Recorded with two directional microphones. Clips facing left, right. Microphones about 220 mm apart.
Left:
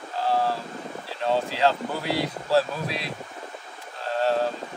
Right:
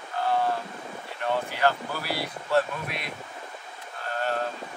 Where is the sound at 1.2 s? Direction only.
25° left (ahead or behind).